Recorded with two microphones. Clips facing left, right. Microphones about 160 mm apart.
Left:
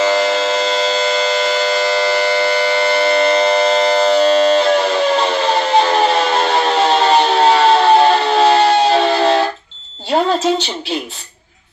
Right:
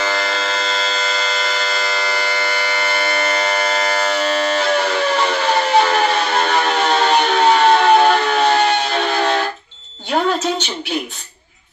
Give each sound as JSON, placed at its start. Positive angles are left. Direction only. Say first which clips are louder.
{"t": 0.0, "sound": "civil defense siren", "louder": "left 7 dB", "side_deg": 20}